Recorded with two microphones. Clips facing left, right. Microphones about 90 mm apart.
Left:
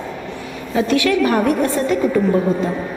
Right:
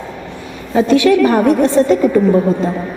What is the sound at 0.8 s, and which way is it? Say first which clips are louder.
A woman's voice: right 6 dB; 25° right (ahead or behind).